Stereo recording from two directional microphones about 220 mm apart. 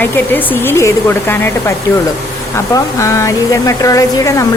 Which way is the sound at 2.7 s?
15° left (ahead or behind).